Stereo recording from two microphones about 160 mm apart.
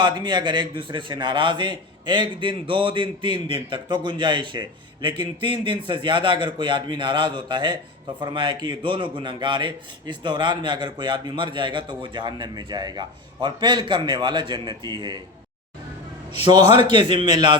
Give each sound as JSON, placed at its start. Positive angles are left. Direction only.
{"t": 0.0, "sound": "speech", "side_deg": -30}
{"t": 16.6, "sound": "a man's voice", "side_deg": 40}
{"t": 16.9, "sound": "speech", "side_deg": -30}